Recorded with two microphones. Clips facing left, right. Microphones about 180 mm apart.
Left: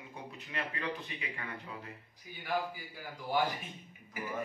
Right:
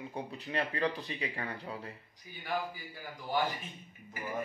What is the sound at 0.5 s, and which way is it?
Speech, 35° right (ahead or behind).